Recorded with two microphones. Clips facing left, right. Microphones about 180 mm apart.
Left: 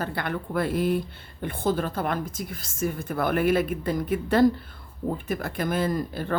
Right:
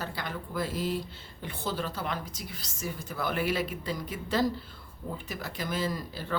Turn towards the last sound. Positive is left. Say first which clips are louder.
# left 7 dB
turn(degrees=55)  # may be behind; listen again after turning